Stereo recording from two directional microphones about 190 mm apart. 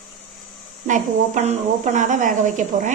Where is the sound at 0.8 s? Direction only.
40° right (ahead or behind).